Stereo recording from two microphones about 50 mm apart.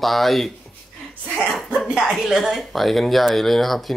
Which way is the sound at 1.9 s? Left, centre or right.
Centre.